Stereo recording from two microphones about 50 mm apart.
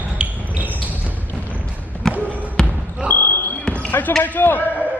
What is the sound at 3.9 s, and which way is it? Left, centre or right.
Basketball bounce, left.